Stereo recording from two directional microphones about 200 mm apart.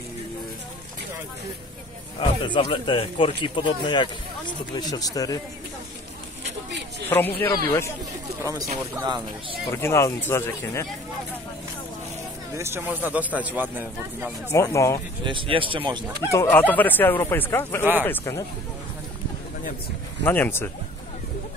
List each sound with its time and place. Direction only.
2.1 s speech: 25° left (ahead or behind)
7.1 s speech: 10° left (ahead or behind)
9.0 s speech: 20° right (ahead or behind)
9.8 s speech: 15° left (ahead or behind)
12.5 s speech: 10° right (ahead or behind)
14.5 s speech: 15° left (ahead or behind)
15.2 s speech: 25° right (ahead or behind)
16.3 s speech: 10° left (ahead or behind)
20.2 s speech: 10° left (ahead or behind)